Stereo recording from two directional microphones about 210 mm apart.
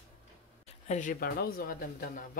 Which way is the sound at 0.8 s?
35° left (ahead or behind).